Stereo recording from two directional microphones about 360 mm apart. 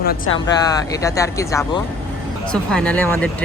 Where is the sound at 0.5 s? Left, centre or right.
Centre.